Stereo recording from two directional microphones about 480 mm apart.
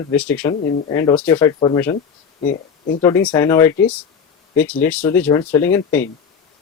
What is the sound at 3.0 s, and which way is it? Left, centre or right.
Speech, centre.